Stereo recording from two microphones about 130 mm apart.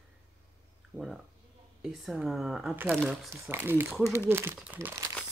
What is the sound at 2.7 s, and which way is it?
Speech, 15° right (ahead or behind).